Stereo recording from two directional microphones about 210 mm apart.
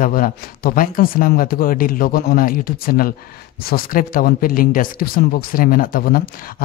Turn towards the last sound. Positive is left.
turn(degrees=45)  # may be behind; listen again after turning